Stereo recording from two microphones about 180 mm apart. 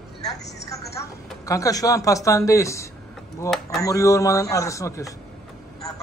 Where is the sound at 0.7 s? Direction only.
20° left (ahead or behind).